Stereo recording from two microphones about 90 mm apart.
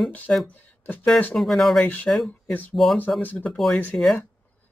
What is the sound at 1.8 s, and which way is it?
Speech, 20° left (ahead or behind).